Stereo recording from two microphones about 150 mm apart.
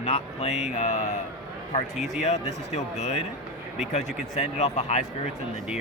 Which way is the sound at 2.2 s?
45° left (ahead or behind).